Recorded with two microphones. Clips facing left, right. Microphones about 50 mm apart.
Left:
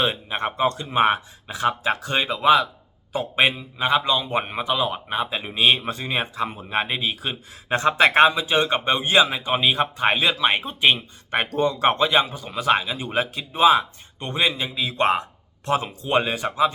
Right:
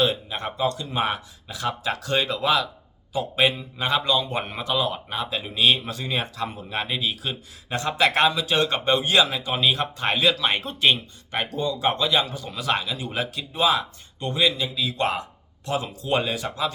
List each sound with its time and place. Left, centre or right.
0.0 s speech: left
3.1 s speech: left
3.5 s speech: centre; by 8.4 s left
8.4 s speech: centre
11.5 s speech: left